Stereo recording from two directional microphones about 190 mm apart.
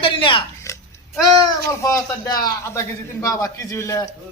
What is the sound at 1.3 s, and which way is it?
Speech, 20° left (ahead or behind).